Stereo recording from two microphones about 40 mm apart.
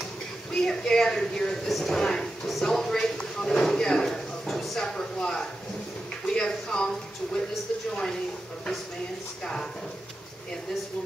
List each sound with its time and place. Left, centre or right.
0.0 s a sound: centre
1.2 s speech: centre
1.7 s speech: centre
2.0 s speech: centre
4.7 s speech: centre
9.4 s speech: centre